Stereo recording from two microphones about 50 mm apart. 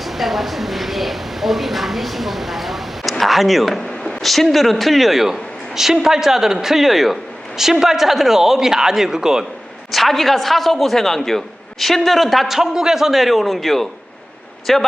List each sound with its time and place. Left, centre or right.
0.0 s a woman's voice: centre
9.9 s a man's voice: centre